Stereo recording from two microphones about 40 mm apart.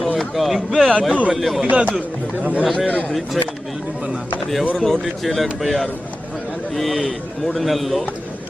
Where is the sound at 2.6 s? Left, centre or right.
Centre.